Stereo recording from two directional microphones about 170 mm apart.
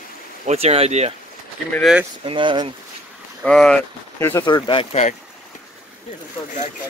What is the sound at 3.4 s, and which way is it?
Speech, 5° left (ahead or behind).